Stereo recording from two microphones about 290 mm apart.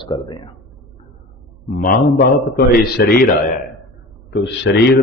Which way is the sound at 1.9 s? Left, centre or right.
Left.